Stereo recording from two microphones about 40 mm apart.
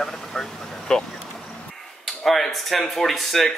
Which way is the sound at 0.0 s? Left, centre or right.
Centre.